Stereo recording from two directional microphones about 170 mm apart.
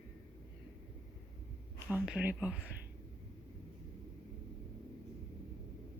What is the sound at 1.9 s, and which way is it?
Speech, 10° right (ahead or behind).